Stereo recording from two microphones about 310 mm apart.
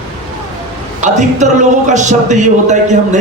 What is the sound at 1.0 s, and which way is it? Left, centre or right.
A man's voice, right.